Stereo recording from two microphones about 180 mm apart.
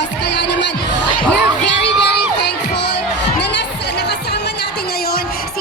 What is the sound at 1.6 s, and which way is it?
Crowd, 70° left (ahead or behind).